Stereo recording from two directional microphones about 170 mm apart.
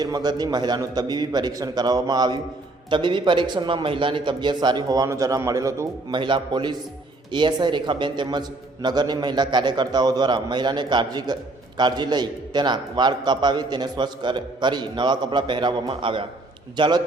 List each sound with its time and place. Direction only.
0.0 s a man's voice: 25° right (ahead or behind)
6.1 s a man's voice: 30° right (ahead or behind)